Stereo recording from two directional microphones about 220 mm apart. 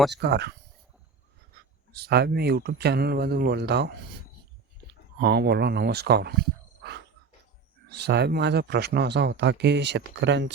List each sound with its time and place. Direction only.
0.1 s speech: 50° right (ahead or behind)
1.5 s a sound: 45° right (ahead or behind)
2.0 s speech: 45° right (ahead or behind)
5.2 s speech: 45° right (ahead or behind)
7.9 s speech: 50° right (ahead or behind)